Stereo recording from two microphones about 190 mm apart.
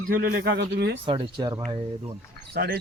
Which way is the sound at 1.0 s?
25° right (ahead or behind).